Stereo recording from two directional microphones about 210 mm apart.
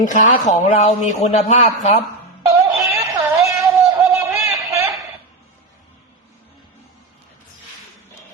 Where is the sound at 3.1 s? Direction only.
15° right (ahead or behind).